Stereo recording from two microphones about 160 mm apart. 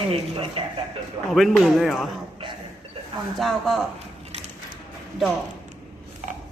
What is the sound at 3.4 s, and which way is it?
Speech, centre (ahead or behind).